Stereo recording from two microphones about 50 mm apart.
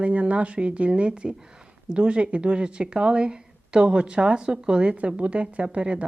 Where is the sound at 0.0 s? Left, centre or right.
Right.